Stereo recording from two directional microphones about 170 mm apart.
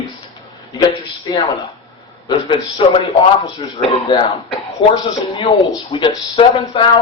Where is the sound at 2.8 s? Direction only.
35° left (ahead or behind).